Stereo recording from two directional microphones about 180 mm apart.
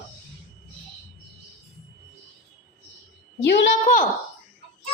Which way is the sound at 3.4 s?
80° left.